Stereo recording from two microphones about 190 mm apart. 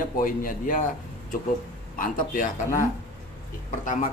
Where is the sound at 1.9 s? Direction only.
45° left (ahead or behind).